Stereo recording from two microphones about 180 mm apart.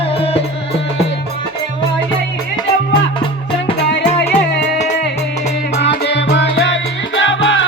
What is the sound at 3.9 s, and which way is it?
Music, 75° left (ahead or behind).